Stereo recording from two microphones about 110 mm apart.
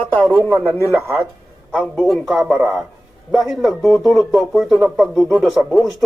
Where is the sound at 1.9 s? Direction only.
Centre (ahead or behind).